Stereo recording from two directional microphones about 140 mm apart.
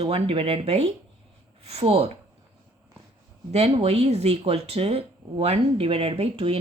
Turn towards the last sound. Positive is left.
turn(degrees=-45)  # may be behind; listen again after turning